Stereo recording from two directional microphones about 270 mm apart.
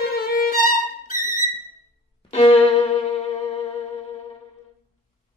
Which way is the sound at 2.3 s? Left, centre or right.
Left.